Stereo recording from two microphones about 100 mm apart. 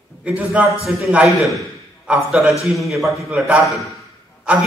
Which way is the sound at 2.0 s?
5° right (ahead or behind).